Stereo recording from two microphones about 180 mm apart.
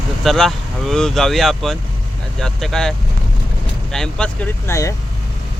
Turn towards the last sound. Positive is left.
turn(degrees=15)  # may be behind; listen again after turning